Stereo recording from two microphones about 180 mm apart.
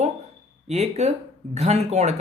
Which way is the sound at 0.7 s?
40° right (ahead or behind).